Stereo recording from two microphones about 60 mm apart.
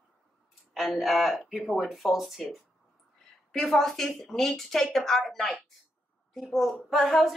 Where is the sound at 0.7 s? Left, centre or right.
Centre.